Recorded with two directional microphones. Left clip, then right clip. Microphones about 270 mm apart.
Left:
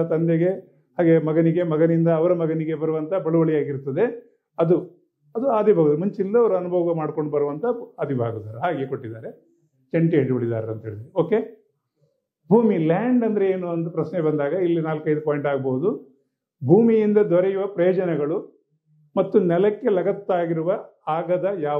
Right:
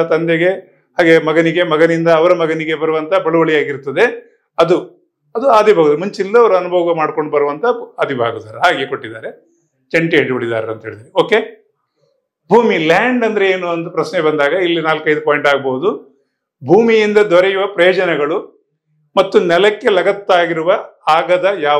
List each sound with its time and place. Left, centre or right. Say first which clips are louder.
0.0 s a man's voice: right 8 dB; centre
5.3 s a man's voice: right 11 dB; centre
5.6 s a man's voice: right 5 dB; centre
16.7 s a man's voice: right 7 dB; centre